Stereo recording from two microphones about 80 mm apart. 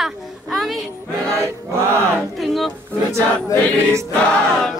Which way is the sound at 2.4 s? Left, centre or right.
Centre.